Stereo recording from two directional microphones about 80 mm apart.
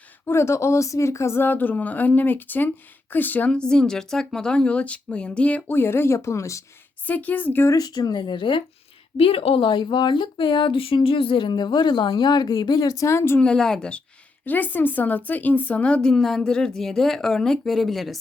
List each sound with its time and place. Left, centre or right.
0.3 s speech: left; by 5.7 s centre
5.7 s speech: left
7.0 s speech: left
7.7 s speech: left
13.4 s speech: centre
14.4 s speech: left; by 18.2 s centre